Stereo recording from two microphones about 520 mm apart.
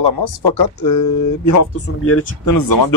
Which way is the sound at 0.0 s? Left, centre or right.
Left.